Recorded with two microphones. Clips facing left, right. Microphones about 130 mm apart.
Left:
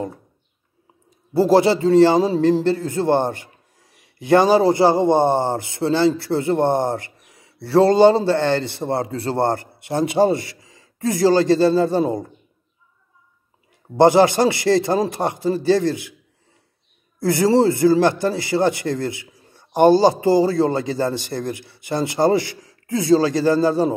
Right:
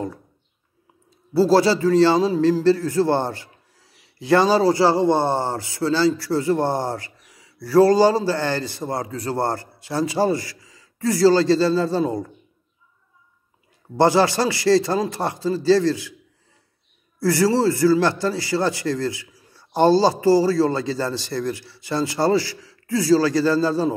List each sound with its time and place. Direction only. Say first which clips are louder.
1.4 s a man's voice: left 1 dB; 20° left (ahead or behind)
3.8 s a sound: left 1 dB; 50° left (ahead or behind)
4.5 s a man's voice: left 2 dB; 20° left (ahead or behind)
13.9 s a man's voice: left 4 dB; 20° left (ahead or behind)
17.2 s a man's voice: left 2 dB; 20° left (ahead or behind)